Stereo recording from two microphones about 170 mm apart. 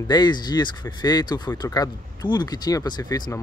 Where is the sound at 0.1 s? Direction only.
25° left (ahead or behind).